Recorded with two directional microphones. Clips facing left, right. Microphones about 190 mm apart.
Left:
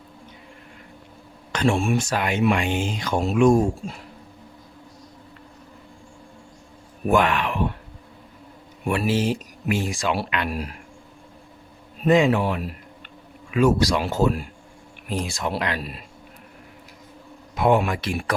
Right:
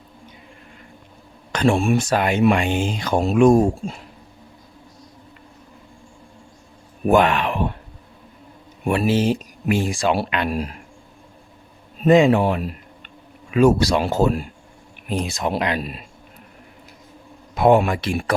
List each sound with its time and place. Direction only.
1.5 s speech: 35° right (ahead or behind)
7.1 s speech: 25° right (ahead or behind)
8.9 s speech: 25° right (ahead or behind)
12.0 s speech: 25° right (ahead or behind)
17.6 s speech: 35° right (ahead or behind)